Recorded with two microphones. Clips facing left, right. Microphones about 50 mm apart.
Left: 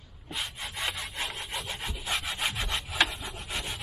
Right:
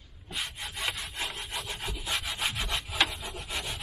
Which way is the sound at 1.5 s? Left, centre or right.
Centre.